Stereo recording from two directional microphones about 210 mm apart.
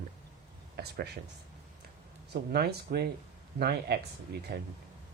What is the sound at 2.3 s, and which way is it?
Speech, 50° right (ahead or behind).